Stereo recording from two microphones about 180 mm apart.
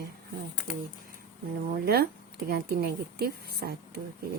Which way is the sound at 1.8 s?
60° right (ahead or behind).